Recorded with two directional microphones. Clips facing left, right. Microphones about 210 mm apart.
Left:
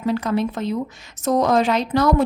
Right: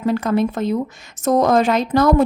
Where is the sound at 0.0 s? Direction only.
50° right (ahead or behind).